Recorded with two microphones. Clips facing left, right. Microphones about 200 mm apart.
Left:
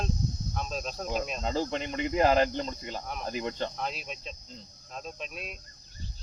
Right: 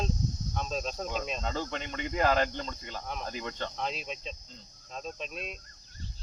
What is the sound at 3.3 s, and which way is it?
Speech, 20° left (ahead or behind).